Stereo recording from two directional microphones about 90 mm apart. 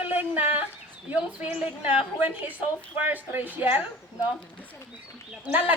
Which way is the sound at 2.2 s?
20° right (ahead or behind).